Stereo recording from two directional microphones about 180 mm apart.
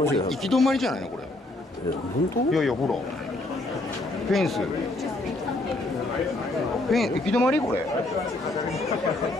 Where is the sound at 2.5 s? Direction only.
Centre (ahead or behind).